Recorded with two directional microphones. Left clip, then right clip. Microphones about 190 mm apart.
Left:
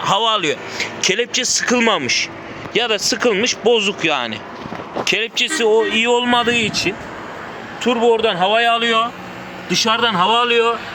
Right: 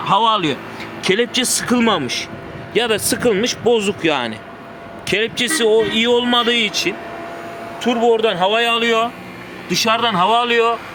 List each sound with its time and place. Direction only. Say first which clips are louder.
0.0 s speech: right 1 dB; 10° left (ahead or behind)
7.8 s a man's voice: left 1 dB; 20° right (ahead or behind)
8.1 s speech: even; 35° right (ahead or behind)
9.7 s speech: even; 20° right (ahead or behind)